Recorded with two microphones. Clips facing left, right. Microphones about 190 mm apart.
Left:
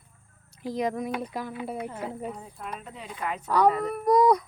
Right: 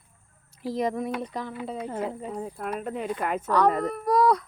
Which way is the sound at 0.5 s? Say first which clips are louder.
Right 1 dB; centre (ahead or behind).